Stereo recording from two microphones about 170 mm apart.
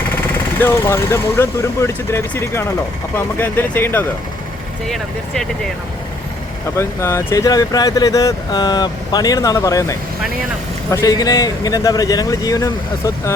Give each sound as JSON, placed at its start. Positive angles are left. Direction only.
{"t": 0.6, "sound": "speech", "side_deg": 15}
{"t": 6.7, "sound": "speech", "side_deg": 15}